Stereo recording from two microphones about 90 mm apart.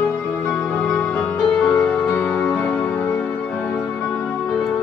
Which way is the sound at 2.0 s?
20° left (ahead or behind).